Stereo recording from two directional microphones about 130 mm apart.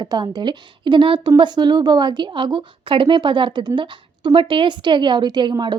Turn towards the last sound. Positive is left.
turn(degrees=-35)  # may be behind; listen again after turning